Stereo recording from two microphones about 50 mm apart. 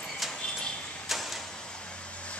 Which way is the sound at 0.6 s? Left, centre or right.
Centre.